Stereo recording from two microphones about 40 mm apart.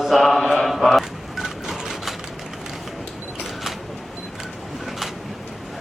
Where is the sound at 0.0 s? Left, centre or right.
Centre.